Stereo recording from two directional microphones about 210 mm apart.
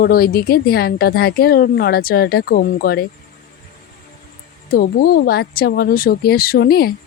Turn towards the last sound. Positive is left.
turn(degrees=45)  # may be behind; listen again after turning